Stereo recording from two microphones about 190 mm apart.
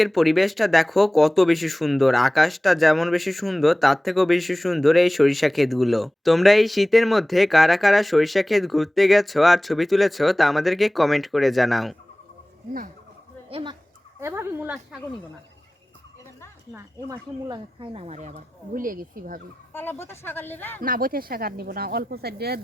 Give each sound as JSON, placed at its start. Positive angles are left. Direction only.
{"t": 0.0, "sound": "speech", "side_deg": 0}
{"t": 13.5, "sound": "speech", "side_deg": -25}
{"t": 14.2, "sound": "speech", "side_deg": -15}
{"t": 16.7, "sound": "speech", "side_deg": -20}
{"t": 19.7, "sound": "speech", "side_deg": 10}
{"t": 20.8, "sound": "speech", "side_deg": -50}